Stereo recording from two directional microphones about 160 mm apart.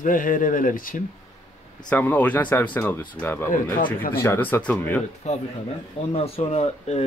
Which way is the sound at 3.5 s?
60° left (ahead or behind).